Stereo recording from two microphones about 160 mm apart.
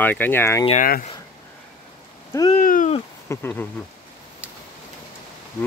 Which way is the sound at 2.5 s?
55° left (ahead or behind).